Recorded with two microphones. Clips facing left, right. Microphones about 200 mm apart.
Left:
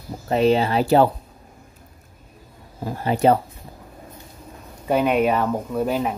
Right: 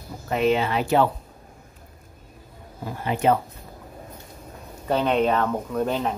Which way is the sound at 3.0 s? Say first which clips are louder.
Left 4 dB; 35° left (ahead or behind).